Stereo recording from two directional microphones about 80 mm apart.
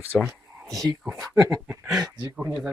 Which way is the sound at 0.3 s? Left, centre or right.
Right.